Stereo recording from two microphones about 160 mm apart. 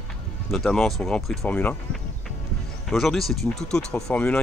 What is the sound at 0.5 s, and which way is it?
Speech, centre (ahead or behind).